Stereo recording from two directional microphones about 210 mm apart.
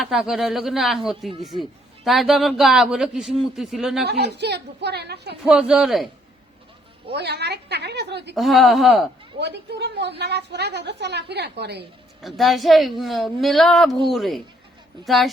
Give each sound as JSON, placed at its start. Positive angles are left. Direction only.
{"t": 0.0, "sound": "a woman's voice", "side_deg": 0}
{"t": 4.0, "sound": "a woman's voice", "side_deg": -50}
{"t": 5.5, "sound": "a woman's voice", "side_deg": -5}
{"t": 7.1, "sound": "a woman's voice", "side_deg": -50}
{"t": 8.4, "sound": "a woman's voice", "side_deg": 0}
{"t": 9.4, "sound": "a woman's voice", "side_deg": -55}
{"t": 12.2, "sound": "a woman's voice", "side_deg": 0}